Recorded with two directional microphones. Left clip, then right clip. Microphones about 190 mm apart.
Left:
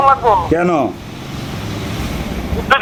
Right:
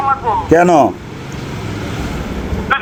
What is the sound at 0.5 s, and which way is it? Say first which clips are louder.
Speech: right 6 dB; 20° right (ahead or behind).